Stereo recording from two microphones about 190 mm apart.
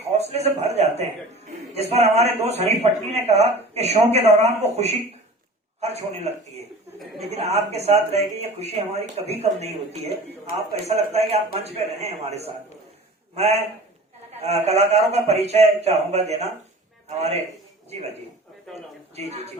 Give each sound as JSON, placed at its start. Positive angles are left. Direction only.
{"t": 0.1, "sound": "a man's voice", "side_deg": -35}